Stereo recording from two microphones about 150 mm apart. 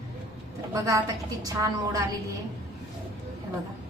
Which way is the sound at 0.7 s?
20° right (ahead or behind).